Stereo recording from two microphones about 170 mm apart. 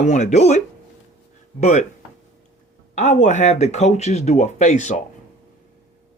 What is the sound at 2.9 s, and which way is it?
Speech, 40° left (ahead or behind).